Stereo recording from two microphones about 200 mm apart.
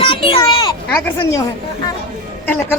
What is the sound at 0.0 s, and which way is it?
Children playing, 25° left (ahead or behind).